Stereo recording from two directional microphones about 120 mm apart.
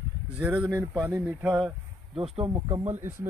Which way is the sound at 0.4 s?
10° right (ahead or behind).